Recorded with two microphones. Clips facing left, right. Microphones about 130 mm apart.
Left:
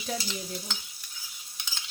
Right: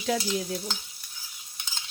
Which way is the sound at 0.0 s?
75° right (ahead or behind).